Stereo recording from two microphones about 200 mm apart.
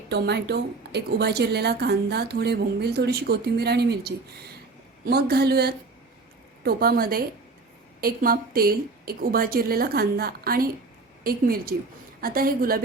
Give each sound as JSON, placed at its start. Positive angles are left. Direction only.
{"t": 0.1, "sound": "a woman's voice", "side_deg": -55}